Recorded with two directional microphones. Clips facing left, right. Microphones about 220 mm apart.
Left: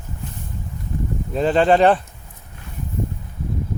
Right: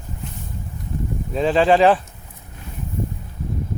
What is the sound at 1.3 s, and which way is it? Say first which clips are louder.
Speech: even; centre (ahead or behind).